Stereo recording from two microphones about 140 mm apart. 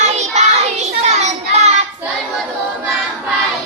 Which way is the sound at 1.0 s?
55° right (ahead or behind).